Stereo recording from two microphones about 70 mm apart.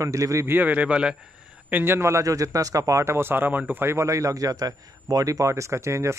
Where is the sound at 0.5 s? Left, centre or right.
Right.